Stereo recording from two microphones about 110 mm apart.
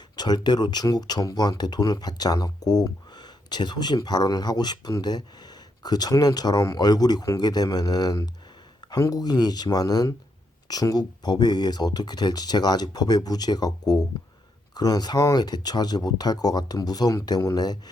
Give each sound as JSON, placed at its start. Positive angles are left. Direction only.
{"t": 0.2, "sound": "speech", "side_deg": 40}